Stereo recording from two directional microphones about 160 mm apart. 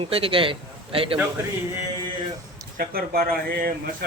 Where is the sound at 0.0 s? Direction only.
35° right (ahead or behind).